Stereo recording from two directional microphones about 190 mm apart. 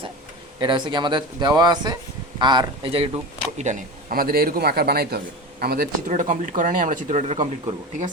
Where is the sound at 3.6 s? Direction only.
40° right (ahead or behind).